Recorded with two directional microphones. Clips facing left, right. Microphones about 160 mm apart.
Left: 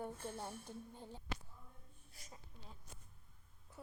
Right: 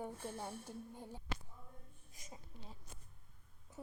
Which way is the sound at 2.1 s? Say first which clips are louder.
Right 3 dB; 15° right (ahead or behind).